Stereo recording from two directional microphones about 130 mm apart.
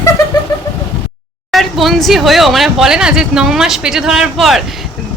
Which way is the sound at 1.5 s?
Centre (ahead or behind).